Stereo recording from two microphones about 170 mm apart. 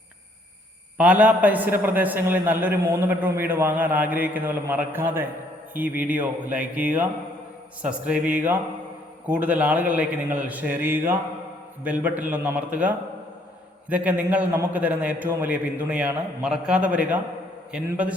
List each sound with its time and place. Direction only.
0.9 s a man's voice: 10° right (ahead or behind)
13.9 s a man's voice: 10° right (ahead or behind)